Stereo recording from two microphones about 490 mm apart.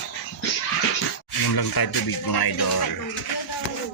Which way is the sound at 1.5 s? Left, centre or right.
Left.